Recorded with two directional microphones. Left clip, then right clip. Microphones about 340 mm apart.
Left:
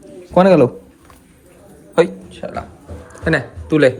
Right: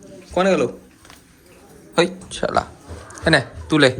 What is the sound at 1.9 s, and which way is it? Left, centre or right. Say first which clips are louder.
Speech: left 4 dB; centre.